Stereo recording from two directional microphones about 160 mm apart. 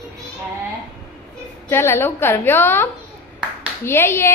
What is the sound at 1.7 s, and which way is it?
A woman's voice, 15° left (ahead or behind).